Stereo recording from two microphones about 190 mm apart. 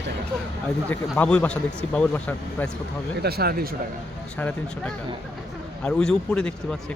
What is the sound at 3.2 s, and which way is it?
Speech, 55° right (ahead or behind).